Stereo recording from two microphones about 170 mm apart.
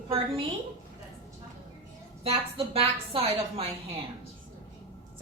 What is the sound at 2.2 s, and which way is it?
A woman's voice, 35° right (ahead or behind).